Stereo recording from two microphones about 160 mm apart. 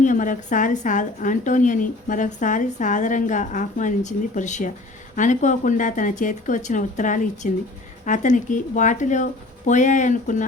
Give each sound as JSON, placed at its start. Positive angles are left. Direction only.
{"t": 0.0, "sound": "a woman's voice", "side_deg": 55}